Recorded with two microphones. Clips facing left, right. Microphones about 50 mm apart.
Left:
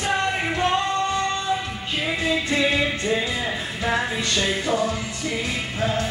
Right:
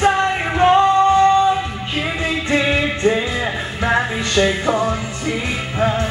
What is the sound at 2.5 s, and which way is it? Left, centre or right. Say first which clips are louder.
Music: right 7 dB; right.